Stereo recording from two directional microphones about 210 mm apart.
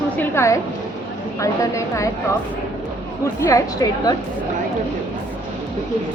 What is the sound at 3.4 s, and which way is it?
Speech, 15° left (ahead or behind).